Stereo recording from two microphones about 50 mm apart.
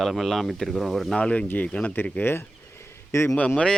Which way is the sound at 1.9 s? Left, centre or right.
Left.